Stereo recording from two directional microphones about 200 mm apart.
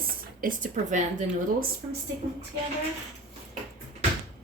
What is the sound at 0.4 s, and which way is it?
Speech, 40° right (ahead or behind).